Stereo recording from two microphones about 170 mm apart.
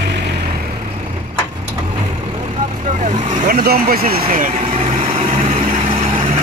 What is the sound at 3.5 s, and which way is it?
Speech, 60° right (ahead or behind).